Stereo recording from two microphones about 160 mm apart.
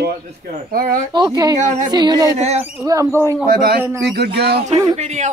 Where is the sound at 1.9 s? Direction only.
25° right (ahead or behind).